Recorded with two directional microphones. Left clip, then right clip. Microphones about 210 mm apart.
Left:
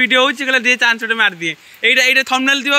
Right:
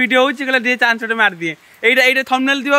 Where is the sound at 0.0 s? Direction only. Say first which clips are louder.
Left 1 dB; 15° right (ahead or behind).